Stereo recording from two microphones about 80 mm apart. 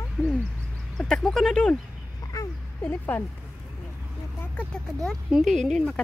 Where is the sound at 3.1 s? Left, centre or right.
Left.